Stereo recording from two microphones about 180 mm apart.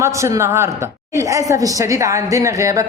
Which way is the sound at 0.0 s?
15° right (ahead or behind).